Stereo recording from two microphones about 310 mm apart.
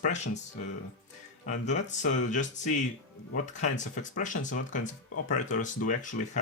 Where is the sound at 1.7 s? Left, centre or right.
Left.